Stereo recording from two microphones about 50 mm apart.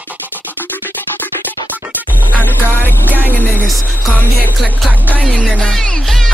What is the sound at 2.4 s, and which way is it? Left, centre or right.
Music, left.